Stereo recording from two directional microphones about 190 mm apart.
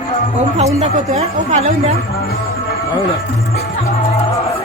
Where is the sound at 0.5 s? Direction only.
35° right (ahead or behind).